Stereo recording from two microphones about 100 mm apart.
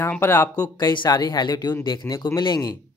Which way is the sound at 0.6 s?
45° left (ahead or behind).